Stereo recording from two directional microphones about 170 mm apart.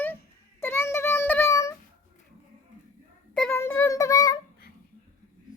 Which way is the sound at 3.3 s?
5° left (ahead or behind).